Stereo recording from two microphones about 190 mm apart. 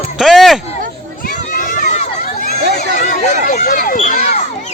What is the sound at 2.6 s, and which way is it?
Crowd, 60° right (ahead or behind).